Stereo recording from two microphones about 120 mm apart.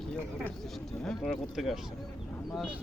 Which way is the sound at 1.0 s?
5° left (ahead or behind).